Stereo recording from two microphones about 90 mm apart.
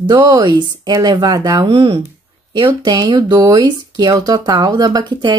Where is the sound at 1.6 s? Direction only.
85° right.